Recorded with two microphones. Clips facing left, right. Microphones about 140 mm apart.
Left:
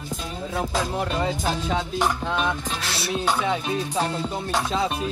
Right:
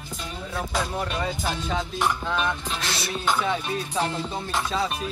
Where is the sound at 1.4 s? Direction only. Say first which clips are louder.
Left 3 dB; centre (ahead or behind).